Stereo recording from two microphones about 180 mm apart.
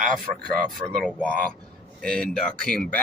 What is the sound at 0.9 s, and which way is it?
Speech, 5° left (ahead or behind).